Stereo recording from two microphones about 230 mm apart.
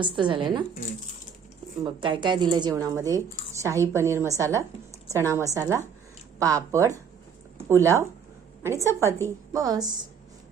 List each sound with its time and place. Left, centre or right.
0.0 s speech: right
1.8 s a woman's voice: right